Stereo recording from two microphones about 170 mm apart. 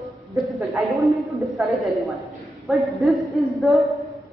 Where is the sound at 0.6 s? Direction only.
Centre (ahead or behind).